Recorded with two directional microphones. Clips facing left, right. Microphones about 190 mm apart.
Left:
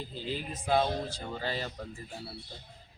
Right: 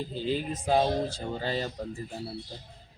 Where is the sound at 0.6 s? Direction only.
35° right (ahead or behind).